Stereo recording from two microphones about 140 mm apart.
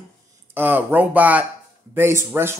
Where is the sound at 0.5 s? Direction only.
15° right (ahead or behind).